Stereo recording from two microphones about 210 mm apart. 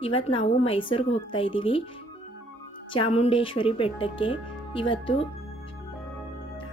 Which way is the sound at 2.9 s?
25° left (ahead or behind).